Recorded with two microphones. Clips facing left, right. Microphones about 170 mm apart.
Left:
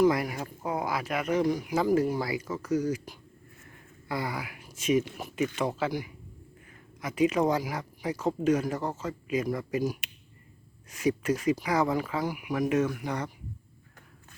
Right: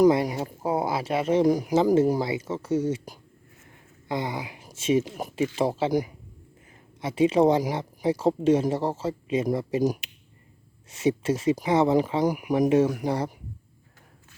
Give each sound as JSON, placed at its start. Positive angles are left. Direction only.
{"t": 0.1, "sound": "speech", "side_deg": -25}
{"t": 2.2, "sound": "speech", "side_deg": -25}
{"t": 4.1, "sound": "speech", "side_deg": -20}
{"t": 10.0, "sound": "a sound", "side_deg": 65}
{"t": 10.8, "sound": "speech", "side_deg": -25}
{"t": 12.2, "sound": "speech", "side_deg": -40}